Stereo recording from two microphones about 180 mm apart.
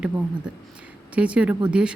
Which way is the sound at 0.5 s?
5° right (ahead or behind).